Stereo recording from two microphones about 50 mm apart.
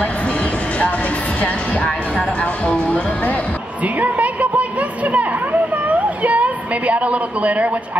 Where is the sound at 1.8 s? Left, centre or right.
Centre.